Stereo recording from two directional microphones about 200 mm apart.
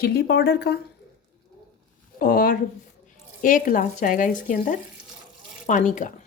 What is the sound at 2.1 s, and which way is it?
Speech, 45° left (ahead or behind).